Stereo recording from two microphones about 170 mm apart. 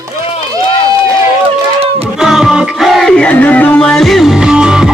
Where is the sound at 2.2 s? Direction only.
Centre (ahead or behind).